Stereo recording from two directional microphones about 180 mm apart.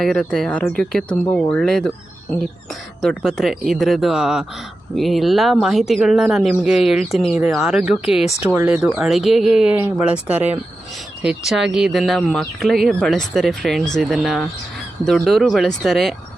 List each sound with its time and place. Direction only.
0.0 s speech: 5° left (ahead or behind)
3.0 s speech: centre (ahead or behind)